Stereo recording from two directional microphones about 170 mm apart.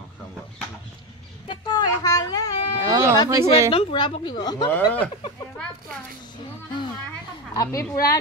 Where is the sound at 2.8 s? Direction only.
20° right (ahead or behind).